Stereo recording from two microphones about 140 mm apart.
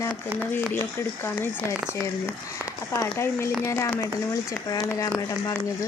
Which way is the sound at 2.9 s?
20° left (ahead or behind).